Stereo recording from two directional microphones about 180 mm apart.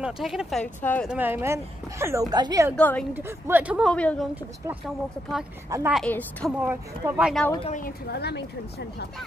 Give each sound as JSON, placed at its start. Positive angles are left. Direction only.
{"t": 0.0, "sound": "speech", "side_deg": -5}
{"t": 1.1, "sound": "speech", "side_deg": -10}
{"t": 2.7, "sound": "a woman's voice", "side_deg": 5}
{"t": 3.2, "sound": "speech", "side_deg": -10}
{"t": 3.9, "sound": "a woman's voice", "side_deg": 5}
{"t": 5.7, "sound": "speech", "side_deg": -15}
{"t": 5.9, "sound": "a woman's voice", "side_deg": 5}
{"t": 6.6, "sound": "speech", "side_deg": -10}
{"t": 7.6, "sound": "speech", "side_deg": 45}
{"t": 8.1, "sound": "speech", "side_deg": 65}